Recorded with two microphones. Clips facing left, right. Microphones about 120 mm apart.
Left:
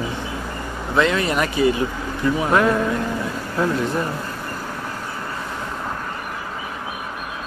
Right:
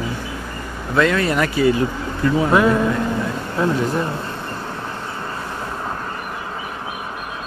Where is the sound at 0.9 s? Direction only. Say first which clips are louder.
Right 2 dB; 20° left (ahead or behind).